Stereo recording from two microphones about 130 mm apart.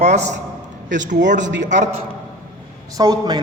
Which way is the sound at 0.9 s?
75° right (ahead or behind).